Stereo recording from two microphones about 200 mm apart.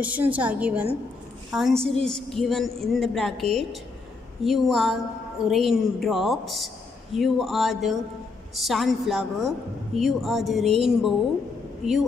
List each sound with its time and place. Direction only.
0.0 s a woman's voice: 5° right (ahead or behind)